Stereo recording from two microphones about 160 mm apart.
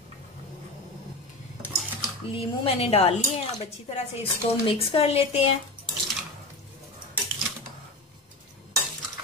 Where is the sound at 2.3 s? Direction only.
40° left (ahead or behind).